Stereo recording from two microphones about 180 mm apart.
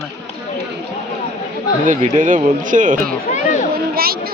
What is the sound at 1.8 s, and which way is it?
Speech, 45° right (ahead or behind).